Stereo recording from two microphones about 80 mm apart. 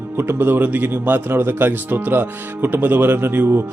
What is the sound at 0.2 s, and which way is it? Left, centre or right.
Speech, right.